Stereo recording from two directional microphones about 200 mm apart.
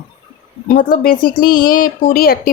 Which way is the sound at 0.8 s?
45° left (ahead or behind).